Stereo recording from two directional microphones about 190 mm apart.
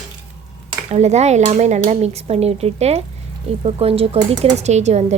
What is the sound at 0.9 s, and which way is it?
Speech, 35° right (ahead or behind).